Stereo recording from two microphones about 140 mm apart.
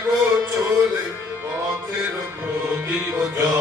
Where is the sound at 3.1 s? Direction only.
15° right (ahead or behind).